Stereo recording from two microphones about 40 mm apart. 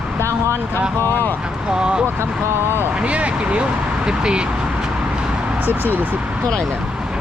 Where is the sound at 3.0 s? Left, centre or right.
Right.